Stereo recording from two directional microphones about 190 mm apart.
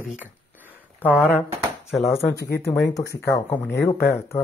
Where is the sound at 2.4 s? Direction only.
60° left (ahead or behind).